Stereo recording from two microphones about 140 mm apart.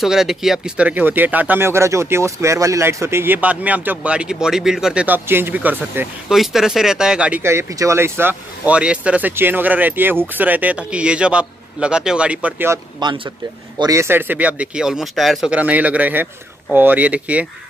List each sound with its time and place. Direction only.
0.0 s speech: centre (ahead or behind)
7.4 s speech: 20° right (ahead or behind)
13.0 s speech: 30° right (ahead or behind); by 17.5 s 10° right (ahead or behind)